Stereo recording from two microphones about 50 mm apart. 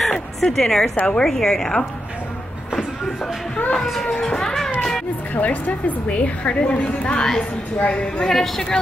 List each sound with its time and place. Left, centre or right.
0.0 s music: centre
0.9 s a woman's voice: left
1.2 s a woman's voice: centre
3.8 s speech: centre
4.1 s a sound: centre
5.3 s a woman's voice: left
7.2 s a woman's voice: centre
8.3 s a woman's voice: centre